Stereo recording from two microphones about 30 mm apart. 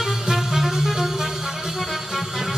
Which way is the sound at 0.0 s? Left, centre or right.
Centre.